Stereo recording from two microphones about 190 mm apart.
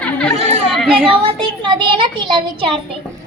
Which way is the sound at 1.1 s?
25° right (ahead or behind).